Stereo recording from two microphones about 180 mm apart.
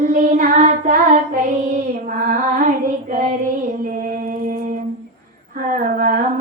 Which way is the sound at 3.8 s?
50° right (ahead or behind).